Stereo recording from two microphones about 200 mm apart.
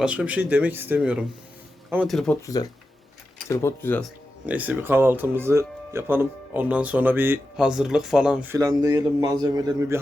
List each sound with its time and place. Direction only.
0.0 s speech: 5° right (ahead or behind)
3.5 s speech: 10° left (ahead or behind)
4.4 s speech: 10° right (ahead or behind)
8.5 s a man's voice: 20° right (ahead or behind)